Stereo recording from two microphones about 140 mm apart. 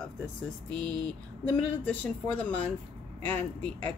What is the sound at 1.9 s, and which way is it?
A woman's voice, 10° left (ahead or behind).